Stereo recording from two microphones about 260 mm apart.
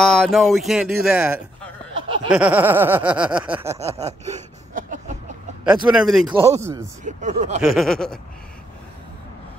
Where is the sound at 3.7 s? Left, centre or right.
Right.